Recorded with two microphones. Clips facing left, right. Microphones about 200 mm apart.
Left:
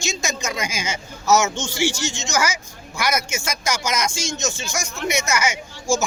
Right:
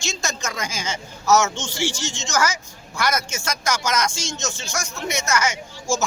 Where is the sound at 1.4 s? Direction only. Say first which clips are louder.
Left 2 dB; 15° left (ahead or behind).